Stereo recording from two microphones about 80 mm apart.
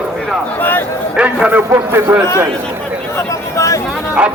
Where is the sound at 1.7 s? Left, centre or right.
Right.